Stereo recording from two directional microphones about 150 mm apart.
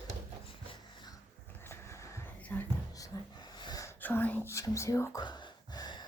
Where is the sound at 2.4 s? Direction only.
10° left (ahead or behind).